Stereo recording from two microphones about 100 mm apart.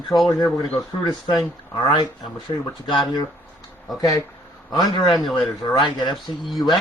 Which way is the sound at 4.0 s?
35° left (ahead or behind).